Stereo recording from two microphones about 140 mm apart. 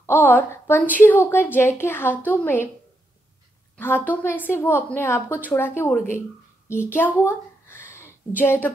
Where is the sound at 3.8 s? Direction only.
15° left (ahead or behind).